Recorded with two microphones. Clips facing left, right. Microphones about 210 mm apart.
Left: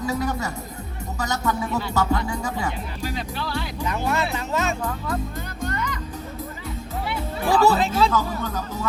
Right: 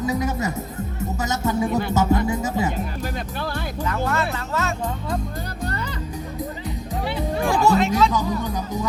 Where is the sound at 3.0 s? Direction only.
50° right (ahead or behind).